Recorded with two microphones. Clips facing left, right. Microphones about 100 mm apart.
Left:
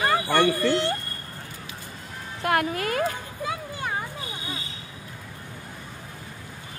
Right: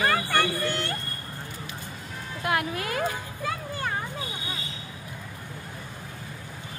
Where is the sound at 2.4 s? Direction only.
45° left (ahead or behind).